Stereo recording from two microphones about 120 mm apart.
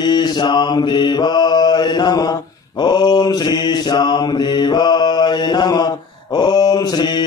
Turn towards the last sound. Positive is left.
turn(degrees=35)  # may be behind; listen again after turning